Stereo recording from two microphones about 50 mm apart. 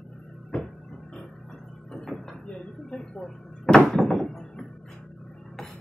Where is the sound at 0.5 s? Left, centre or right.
Left.